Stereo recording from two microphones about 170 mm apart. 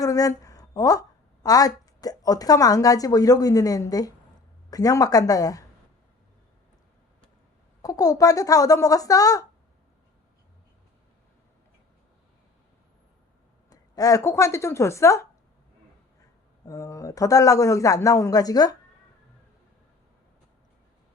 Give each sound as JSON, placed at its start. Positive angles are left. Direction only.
{"t": 0.0, "sound": "a woman's voice", "side_deg": 20}
{"t": 7.8, "sound": "a man's voice", "side_deg": 20}
{"t": 13.7, "sound": "speech", "side_deg": 20}
{"t": 16.6, "sound": "a man's voice", "side_deg": 20}